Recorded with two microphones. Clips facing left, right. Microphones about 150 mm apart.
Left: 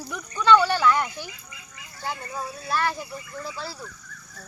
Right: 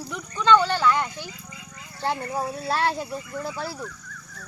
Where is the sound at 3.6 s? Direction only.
50° right (ahead or behind).